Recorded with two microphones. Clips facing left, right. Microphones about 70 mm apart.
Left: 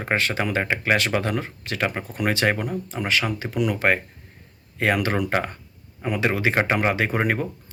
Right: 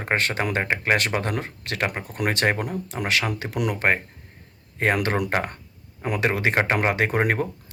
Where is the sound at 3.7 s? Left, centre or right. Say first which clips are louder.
Left 1 dB; right.